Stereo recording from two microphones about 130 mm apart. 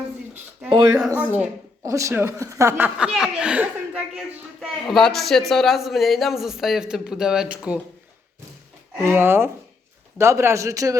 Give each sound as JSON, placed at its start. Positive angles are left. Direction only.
{"t": 1.2, "sound": "speech", "side_deg": -10}
{"t": 1.8, "sound": "a man's voice", "side_deg": -25}
{"t": 9.0, "sound": "speech", "side_deg": -15}